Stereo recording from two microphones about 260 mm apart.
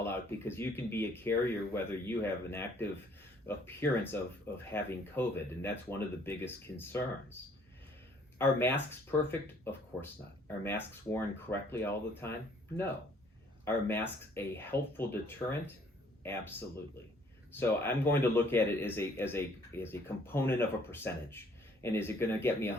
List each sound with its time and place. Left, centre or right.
0.0 s speech: centre
8.4 s speech: centre